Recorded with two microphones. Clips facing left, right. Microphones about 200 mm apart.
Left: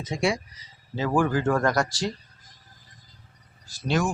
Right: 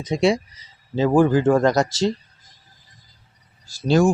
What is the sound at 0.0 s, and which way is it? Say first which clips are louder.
Speech: right 7 dB; 20° right (ahead or behind).